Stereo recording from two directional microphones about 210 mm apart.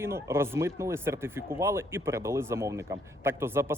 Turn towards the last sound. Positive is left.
turn(degrees=-10)  # may be behind; listen again after turning